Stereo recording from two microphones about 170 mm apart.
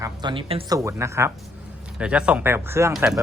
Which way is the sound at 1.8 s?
5° right (ahead or behind).